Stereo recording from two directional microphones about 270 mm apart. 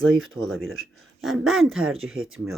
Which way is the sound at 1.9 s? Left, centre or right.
Right.